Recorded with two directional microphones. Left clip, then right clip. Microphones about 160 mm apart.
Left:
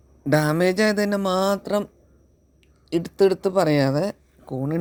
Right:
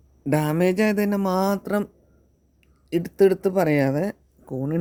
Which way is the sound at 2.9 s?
25° right (ahead or behind).